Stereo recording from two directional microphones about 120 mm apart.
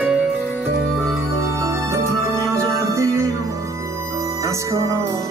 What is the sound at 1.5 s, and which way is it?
Music, 25° right (ahead or behind).